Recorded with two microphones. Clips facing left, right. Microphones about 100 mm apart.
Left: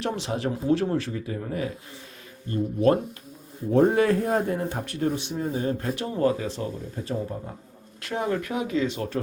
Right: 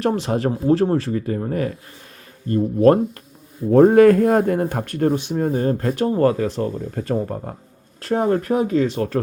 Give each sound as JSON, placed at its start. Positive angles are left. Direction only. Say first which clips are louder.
{"t": 0.0, "sound": "speech", "louder": "right 8 dB", "side_deg": -45}
{"t": 8.0, "sound": "speech", "louder": "right 8 dB", "side_deg": -40}